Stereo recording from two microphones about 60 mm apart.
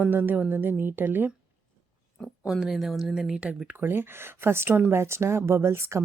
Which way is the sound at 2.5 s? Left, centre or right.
Centre.